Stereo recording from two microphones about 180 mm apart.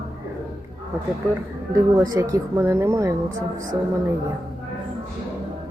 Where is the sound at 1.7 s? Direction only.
20° right (ahead or behind).